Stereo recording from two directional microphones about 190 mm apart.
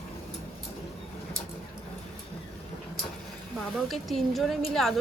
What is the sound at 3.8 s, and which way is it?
A woman's voice, centre (ahead or behind).